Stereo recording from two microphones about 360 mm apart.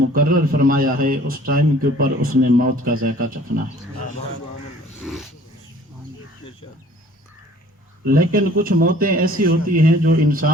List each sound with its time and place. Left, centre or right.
0.1 s a man's voice: right
5.0 s speech: centre
8.0 s a man's voice: right